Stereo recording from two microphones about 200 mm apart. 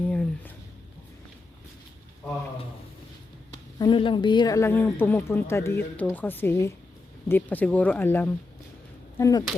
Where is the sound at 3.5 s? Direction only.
20° left (ahead or behind).